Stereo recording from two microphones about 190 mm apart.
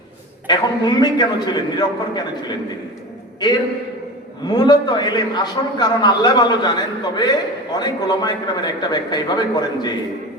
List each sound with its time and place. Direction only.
0.4 s a man's voice: 20° left (ahead or behind)
4.4 s a man's voice: 20° left (ahead or behind)